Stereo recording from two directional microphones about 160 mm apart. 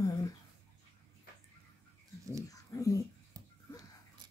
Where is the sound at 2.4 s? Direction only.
20° left (ahead or behind).